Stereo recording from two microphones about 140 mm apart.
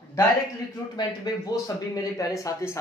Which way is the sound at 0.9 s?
30° left (ahead or behind).